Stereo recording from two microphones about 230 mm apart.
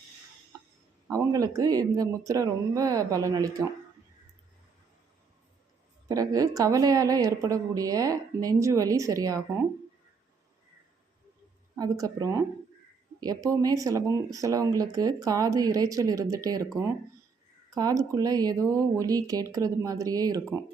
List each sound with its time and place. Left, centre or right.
1.0 s speech: centre
6.1 s speech: centre
11.8 s speech: centre
17.7 s speech: centre